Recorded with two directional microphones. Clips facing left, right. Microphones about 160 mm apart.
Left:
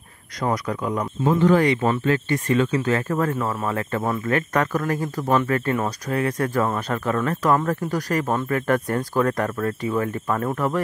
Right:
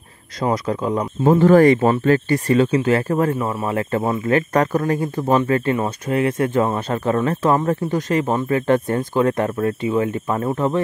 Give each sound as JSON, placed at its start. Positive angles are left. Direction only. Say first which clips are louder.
{"t": 0.4, "sound": "speech", "louder": "right 4 dB", "side_deg": -25}
{"t": 3.3, "sound": "speech", "louder": "right 2 dB", "side_deg": -10}
{"t": 3.6, "sound": "speech", "louder": "right 6 dB", "side_deg": -30}